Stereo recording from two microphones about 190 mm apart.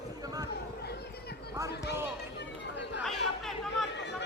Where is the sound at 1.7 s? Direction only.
60° left (ahead or behind).